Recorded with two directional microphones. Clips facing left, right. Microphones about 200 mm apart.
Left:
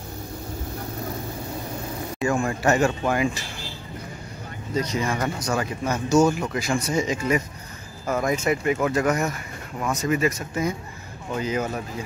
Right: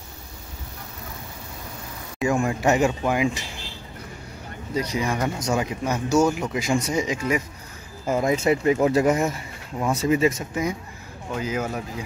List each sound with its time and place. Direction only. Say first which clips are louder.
2.1 s speech: right 2 dB; 5° right (ahead or behind)
4.7 s speech: even; 10° right (ahead or behind)
8.1 s speech: right 2 dB; 25° right (ahead or behind)
10.5 s speech: even; 10° right (ahead or behind)